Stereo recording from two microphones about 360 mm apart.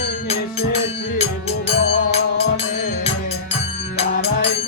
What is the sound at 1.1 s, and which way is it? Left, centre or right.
Music, centre.